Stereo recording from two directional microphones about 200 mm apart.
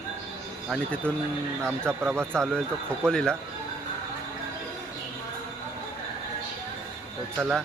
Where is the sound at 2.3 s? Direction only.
5° left (ahead or behind).